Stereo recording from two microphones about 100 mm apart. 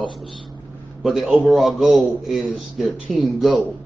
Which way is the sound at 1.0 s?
Centre (ahead or behind).